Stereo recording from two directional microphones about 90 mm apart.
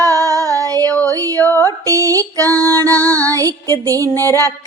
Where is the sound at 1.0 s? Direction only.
40° right (ahead or behind).